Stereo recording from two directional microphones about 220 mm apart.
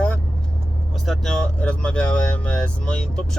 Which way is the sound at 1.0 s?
Centre (ahead or behind).